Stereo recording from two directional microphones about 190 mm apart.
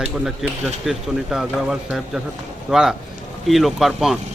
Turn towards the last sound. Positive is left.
turn(degrees=0)  # may be behind; listen again after turning